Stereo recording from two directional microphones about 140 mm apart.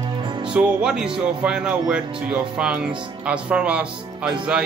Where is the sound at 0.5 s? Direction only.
5° right (ahead or behind).